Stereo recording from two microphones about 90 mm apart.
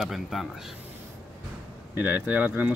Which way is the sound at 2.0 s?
20° right (ahead or behind).